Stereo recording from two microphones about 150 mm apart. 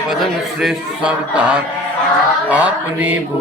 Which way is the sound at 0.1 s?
5° right (ahead or behind).